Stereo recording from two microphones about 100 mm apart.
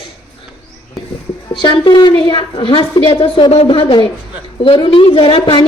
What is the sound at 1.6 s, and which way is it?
A woman's voice, 50° left (ahead or behind).